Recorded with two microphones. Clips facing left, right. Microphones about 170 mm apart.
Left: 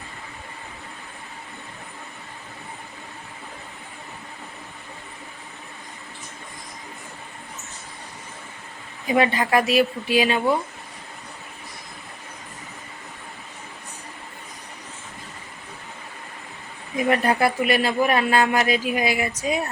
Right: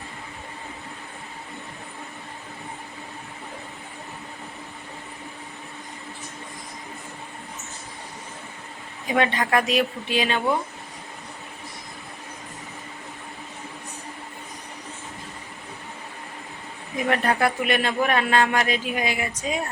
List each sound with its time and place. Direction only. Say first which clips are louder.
9.1 s speech: left 2 dB; 5° left (ahead or behind)
17.1 s a man's voice: left 2 dB; 5° left (ahead or behind)